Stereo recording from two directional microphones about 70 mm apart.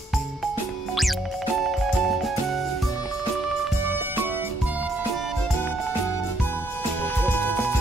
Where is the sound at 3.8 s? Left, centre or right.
Right.